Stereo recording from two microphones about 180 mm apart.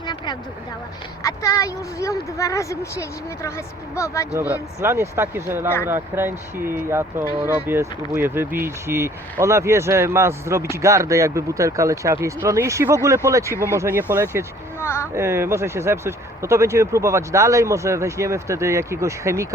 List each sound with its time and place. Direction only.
1.2 s a woman's voice: 20° left (ahead or behind)
4.8 s speech: 15° right (ahead or behind)
14.8 s a sound: 15° left (ahead or behind)
15.1 s speech: 15° right (ahead or behind)